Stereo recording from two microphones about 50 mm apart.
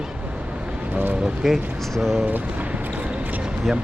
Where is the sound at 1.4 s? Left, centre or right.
Centre.